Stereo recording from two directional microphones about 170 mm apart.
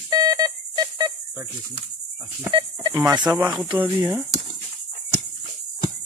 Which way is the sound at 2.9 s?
20° right (ahead or behind).